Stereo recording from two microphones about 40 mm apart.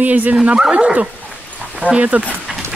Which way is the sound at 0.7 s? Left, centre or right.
Right.